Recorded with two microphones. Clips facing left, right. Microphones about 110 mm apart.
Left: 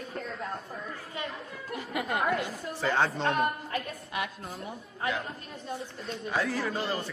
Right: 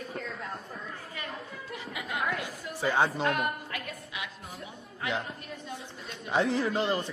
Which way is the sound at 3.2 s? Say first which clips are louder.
Left 2 dB; 35° left (ahead or behind).